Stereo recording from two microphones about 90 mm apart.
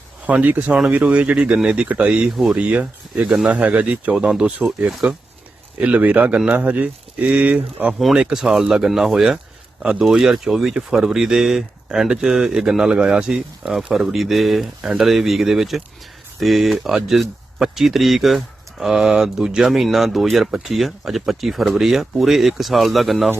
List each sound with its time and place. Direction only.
0.3 s speech: 15° right (ahead or behind)
7.9 s speech: centre (ahead or behind)